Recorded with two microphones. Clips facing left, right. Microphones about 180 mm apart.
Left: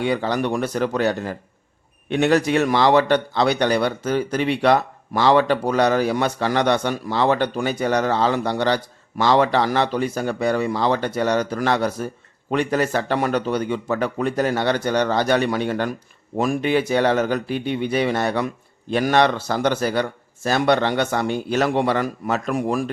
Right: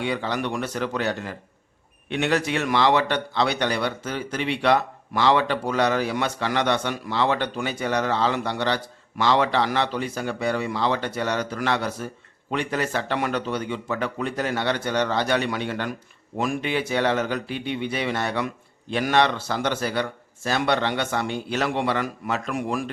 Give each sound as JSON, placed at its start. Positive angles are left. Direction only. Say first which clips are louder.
{"t": 0.0, "sound": "a man's voice", "louder": "left 5 dB", "side_deg": 45}